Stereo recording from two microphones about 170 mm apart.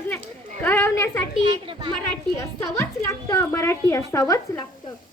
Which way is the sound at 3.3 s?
15° left (ahead or behind).